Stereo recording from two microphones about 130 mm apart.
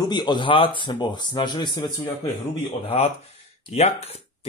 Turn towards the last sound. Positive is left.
turn(degrees=55)  # may be behind; listen again after turning